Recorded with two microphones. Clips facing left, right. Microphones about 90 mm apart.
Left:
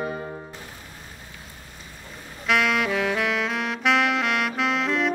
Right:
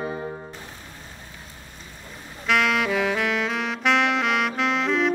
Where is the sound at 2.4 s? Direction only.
Centre (ahead or behind).